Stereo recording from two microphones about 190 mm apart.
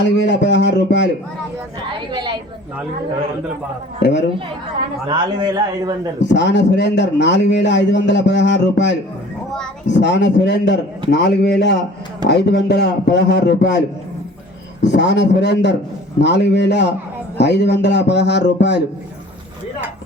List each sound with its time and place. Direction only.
0.0 s a man's voice: 65° left (ahead or behind)
2.1 s a sound: 25° right (ahead or behind)
4.0 s a man's voice: 65° left (ahead or behind)
5.0 s a man's voice: 25° right (ahead or behind)
6.2 s a man's voice: 70° left (ahead or behind)